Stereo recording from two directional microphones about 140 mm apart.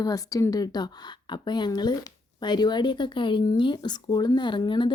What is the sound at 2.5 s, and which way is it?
Speech, 30° left (ahead or behind).